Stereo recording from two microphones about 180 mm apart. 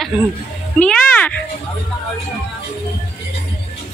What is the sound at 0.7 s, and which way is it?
Speech, 5° left (ahead or behind).